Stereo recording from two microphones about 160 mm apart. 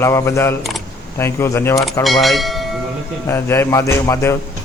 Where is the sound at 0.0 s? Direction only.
20° left (ahead or behind).